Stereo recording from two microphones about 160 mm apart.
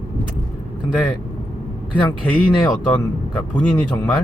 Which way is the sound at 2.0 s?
10° left (ahead or behind).